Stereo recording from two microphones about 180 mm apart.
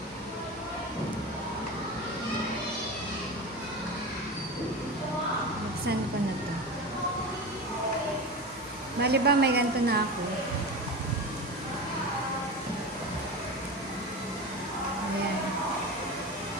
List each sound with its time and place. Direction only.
9.0 s a woman's voice: 65° right (ahead or behind)